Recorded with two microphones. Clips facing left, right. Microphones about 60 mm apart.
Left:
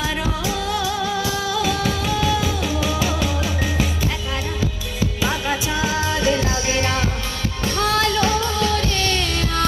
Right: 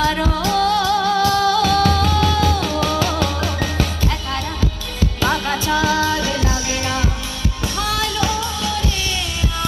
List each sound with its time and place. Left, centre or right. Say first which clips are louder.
0.0 s music: right 5 dB; centre
5.2 s music: right 4 dB; centre; by 9.6 s left